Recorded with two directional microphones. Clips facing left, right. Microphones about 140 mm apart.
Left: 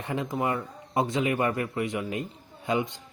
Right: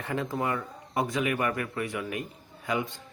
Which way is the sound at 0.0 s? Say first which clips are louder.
Left 1 dB; 20° left (ahead or behind).